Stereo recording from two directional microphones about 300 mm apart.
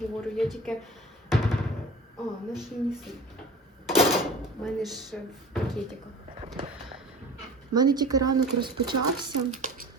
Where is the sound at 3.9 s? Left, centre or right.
Centre.